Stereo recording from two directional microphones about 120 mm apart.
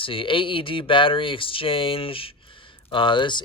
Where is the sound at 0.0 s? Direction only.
45° left (ahead or behind).